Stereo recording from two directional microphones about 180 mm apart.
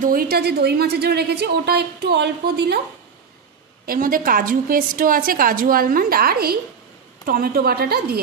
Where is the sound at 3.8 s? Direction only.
50° right (ahead or behind).